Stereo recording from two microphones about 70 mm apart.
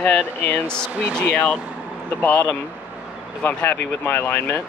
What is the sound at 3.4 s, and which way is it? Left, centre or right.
Speech, left.